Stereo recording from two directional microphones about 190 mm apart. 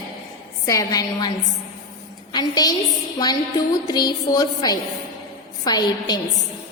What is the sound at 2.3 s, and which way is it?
A woman's voice, 20° left (ahead or behind).